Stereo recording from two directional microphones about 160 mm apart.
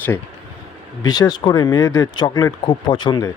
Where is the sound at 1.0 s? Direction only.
25° left (ahead or behind).